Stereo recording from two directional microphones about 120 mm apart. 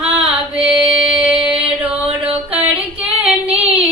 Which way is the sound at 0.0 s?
10° right (ahead or behind).